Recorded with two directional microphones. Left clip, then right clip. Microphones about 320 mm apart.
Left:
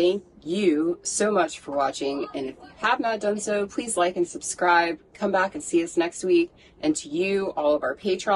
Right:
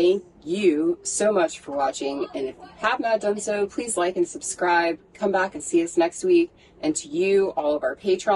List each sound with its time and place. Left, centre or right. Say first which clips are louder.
0.0 s a woman's voice: right 2 dB; centre